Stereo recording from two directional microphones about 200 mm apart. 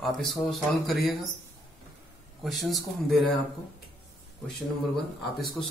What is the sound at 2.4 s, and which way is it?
Speech, centre (ahead or behind).